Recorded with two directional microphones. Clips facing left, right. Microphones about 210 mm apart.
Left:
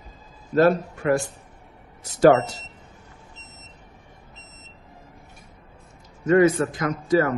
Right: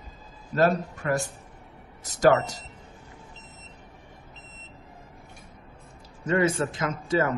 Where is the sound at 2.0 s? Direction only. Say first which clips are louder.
Left 10 dB; 40° right (ahead or behind).